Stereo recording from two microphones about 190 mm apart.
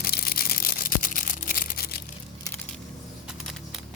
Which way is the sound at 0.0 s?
55° left (ahead or behind).